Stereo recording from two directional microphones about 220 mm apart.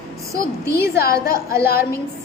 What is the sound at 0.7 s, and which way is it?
Speech, 45° left (ahead or behind).